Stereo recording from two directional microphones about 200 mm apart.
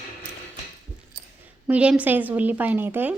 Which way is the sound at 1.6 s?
5° right (ahead or behind).